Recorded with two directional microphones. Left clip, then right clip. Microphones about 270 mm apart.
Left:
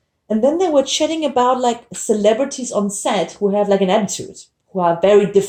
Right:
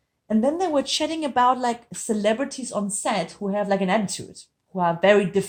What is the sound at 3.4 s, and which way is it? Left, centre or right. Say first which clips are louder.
Speech: left 8 dB; right.